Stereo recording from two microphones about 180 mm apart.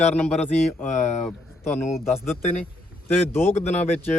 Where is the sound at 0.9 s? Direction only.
40° left (ahead or behind).